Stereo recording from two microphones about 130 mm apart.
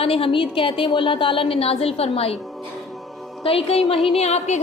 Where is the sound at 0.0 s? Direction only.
45° left (ahead or behind).